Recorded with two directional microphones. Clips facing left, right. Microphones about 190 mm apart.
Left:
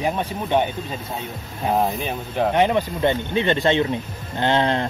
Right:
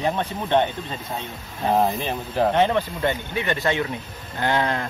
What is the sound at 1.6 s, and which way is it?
Speech, centre (ahead or behind).